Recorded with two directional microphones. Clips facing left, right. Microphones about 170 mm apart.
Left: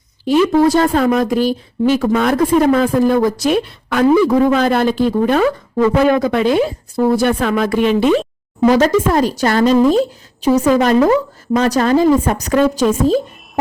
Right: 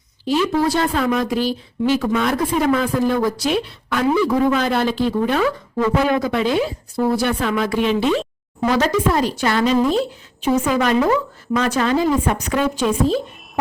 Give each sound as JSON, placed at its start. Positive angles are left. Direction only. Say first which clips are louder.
{"t": 0.3, "sound": "a woman's voice", "louder": "left 6 dB", "side_deg": 45}